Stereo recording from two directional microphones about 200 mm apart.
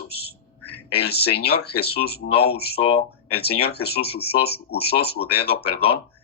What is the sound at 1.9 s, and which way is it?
Speech, 50° left (ahead or behind).